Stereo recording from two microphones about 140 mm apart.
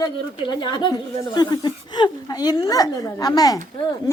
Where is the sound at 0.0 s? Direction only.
35° left (ahead or behind).